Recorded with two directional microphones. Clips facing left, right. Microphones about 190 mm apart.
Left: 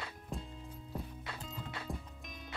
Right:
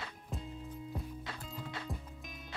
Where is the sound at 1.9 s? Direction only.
15° left (ahead or behind).